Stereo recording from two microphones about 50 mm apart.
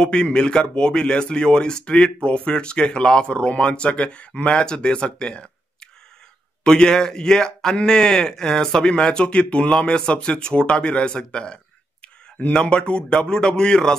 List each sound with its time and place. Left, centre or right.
0.0 s speech: centre